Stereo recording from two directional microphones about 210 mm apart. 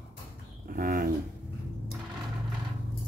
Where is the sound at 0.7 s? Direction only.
40° right (ahead or behind).